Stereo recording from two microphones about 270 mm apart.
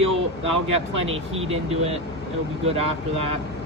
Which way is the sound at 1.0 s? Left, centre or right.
Right.